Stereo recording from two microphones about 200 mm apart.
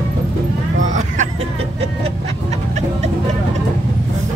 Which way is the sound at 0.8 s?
40° right (ahead or behind).